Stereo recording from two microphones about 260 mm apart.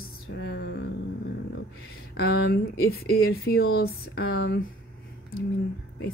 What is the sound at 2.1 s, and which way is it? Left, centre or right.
Speech, left.